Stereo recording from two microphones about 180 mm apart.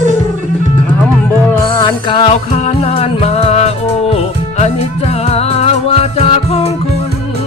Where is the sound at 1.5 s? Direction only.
20° left (ahead or behind).